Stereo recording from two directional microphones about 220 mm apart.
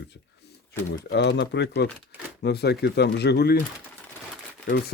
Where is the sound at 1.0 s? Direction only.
55° left (ahead or behind).